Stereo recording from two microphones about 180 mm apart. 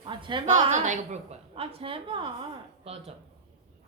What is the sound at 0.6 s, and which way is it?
A woman's voice, 40° right (ahead or behind).